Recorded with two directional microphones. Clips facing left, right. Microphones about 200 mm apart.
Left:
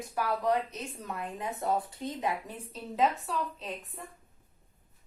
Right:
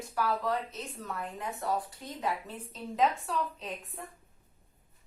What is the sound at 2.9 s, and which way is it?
A woman's voice, centre (ahead or behind).